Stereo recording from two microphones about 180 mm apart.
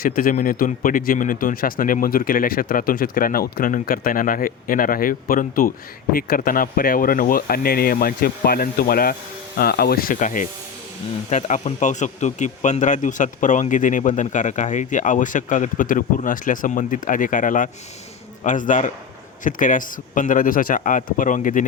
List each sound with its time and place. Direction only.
0.0 s speech: 50° left (ahead or behind)